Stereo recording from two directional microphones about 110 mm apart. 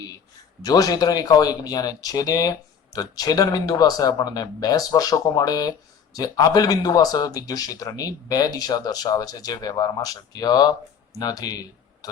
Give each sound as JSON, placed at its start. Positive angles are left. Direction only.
{"t": 0.6, "sound": "speech", "side_deg": 35}